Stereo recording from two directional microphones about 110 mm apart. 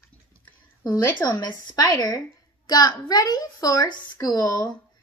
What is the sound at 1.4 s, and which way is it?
A woman's voice, 35° left (ahead or behind).